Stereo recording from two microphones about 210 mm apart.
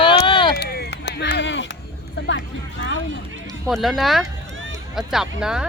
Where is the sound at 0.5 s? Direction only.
50° left (ahead or behind).